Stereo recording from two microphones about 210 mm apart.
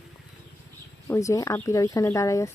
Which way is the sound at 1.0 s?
15° left (ahead or behind).